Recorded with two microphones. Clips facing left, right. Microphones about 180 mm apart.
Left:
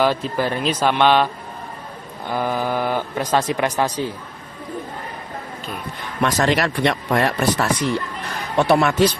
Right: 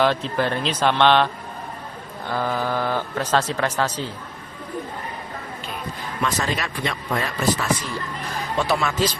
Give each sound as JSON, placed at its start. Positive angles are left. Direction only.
{"t": 0.0, "sound": "a man's voice", "side_deg": 10}
{"t": 6.2, "sound": "speech", "side_deg": 75}